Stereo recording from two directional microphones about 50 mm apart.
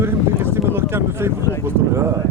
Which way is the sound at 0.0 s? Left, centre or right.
Right.